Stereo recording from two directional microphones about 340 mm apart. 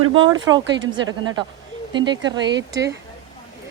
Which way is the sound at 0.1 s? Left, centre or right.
Centre.